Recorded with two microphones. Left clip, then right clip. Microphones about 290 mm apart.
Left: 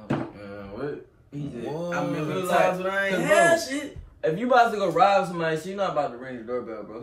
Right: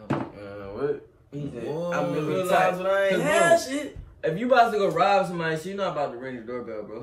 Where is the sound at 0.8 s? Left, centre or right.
Centre.